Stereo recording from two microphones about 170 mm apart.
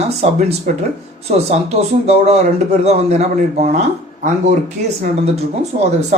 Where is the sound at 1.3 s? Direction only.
40° right (ahead or behind).